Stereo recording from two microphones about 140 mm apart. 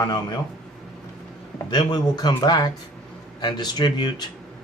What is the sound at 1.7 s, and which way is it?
Speech, 30° left (ahead or behind).